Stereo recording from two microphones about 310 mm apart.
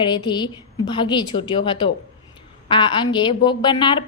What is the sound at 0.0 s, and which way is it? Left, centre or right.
A woman's voice, centre.